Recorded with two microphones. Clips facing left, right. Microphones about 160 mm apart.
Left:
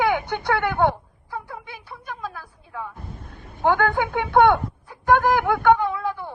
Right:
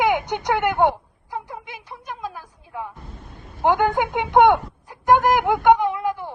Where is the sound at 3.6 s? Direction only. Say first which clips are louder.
Right 1 dB; 20° right (ahead or behind).